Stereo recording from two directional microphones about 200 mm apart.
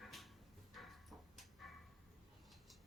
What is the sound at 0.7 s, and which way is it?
Tick-tock, centre (ahead or behind).